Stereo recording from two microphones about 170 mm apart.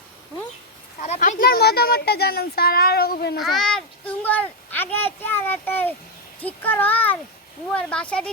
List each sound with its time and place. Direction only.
1.0 s speech: 40° left (ahead or behind); by 3.3 s 65° left (ahead or behind)
3.3 s speech: centre (ahead or behind)